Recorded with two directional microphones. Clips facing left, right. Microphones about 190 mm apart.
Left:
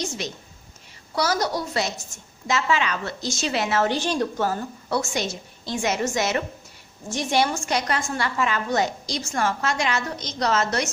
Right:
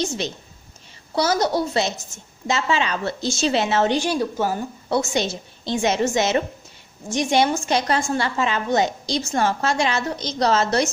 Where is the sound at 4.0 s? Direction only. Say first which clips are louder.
Right 2 dB; 10° right (ahead or behind).